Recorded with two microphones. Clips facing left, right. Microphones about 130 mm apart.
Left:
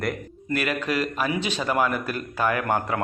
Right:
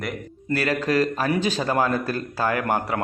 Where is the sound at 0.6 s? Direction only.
35° right (ahead or behind).